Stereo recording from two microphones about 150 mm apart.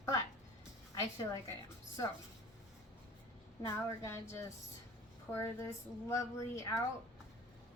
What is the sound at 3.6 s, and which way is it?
A woman's voice, 20° left (ahead or behind).